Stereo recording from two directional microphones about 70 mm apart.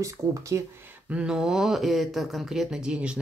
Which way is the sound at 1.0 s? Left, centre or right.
Centre.